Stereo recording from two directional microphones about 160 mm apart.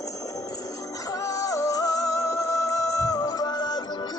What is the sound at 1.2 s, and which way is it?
Music, 20° left (ahead or behind).